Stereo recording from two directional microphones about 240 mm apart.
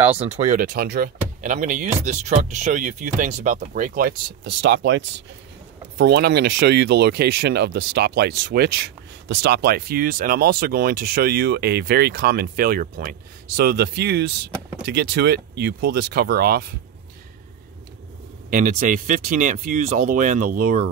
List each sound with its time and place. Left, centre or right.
0.2 s speech: right
18.5 s speech: right